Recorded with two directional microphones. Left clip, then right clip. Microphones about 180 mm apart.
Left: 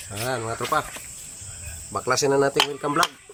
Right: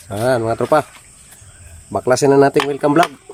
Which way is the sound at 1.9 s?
55° right (ahead or behind).